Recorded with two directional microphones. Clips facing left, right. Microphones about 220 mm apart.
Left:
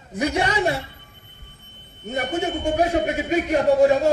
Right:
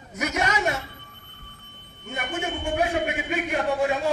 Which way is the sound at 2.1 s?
40° left (ahead or behind).